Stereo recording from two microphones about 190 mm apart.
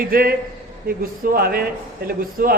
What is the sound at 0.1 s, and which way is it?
Speech, 50° right (ahead or behind).